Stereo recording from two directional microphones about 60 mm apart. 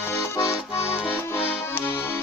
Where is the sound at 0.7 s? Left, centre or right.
Left.